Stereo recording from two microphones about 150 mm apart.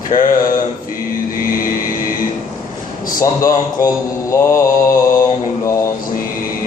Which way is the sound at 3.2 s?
20° left (ahead or behind).